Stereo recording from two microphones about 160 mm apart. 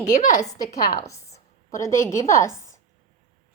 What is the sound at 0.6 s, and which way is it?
A woman's voice, 20° left (ahead or behind).